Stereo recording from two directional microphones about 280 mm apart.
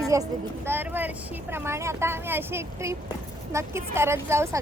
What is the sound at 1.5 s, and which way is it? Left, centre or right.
A woman's voice, centre.